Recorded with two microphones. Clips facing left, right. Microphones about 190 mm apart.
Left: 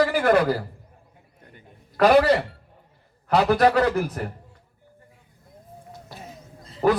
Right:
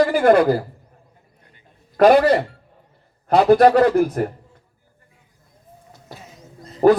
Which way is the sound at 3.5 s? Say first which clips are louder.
Right 6 dB; 50° right (ahead or behind).